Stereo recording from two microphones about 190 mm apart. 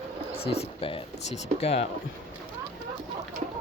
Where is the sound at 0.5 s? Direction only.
30° left (ahead or behind).